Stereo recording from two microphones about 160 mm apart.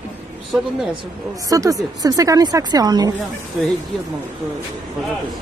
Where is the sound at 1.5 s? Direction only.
20° right (ahead or behind).